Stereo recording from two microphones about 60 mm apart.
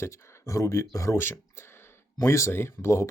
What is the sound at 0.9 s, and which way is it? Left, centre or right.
Speech, left.